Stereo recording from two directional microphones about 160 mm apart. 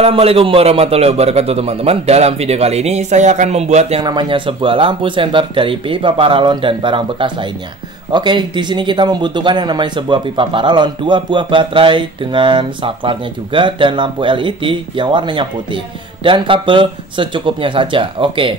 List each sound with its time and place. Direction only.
0.0 s a man's voice: 40° right (ahead or behind)
4.0 s a man's voice: 30° right (ahead or behind)